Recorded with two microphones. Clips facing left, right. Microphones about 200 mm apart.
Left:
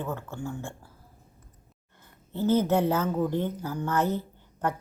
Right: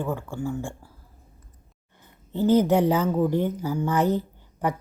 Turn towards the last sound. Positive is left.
turn(degrees=-15)  # may be behind; listen again after turning